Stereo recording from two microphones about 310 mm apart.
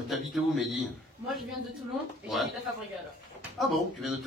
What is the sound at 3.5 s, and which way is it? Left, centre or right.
Speech, centre.